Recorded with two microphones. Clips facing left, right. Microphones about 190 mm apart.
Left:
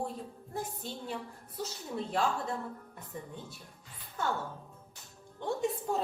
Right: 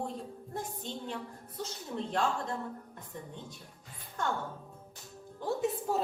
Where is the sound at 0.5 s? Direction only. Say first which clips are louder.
Left 1 dB; 10° left (ahead or behind).